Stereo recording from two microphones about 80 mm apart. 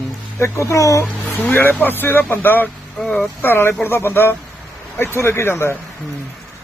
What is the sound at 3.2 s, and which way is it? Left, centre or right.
A man's voice, left.